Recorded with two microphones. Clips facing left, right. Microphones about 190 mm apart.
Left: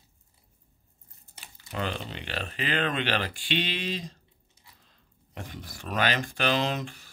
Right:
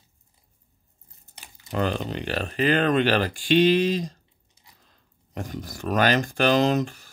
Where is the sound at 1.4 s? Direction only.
45° right (ahead or behind).